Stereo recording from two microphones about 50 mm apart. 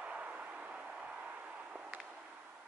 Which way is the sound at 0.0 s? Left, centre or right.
Right.